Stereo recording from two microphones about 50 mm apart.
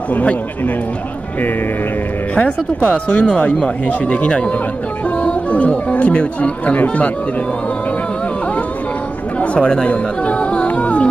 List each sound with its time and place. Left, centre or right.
0.1 s speech: left
2.3 s speech: left
9.4 s music: left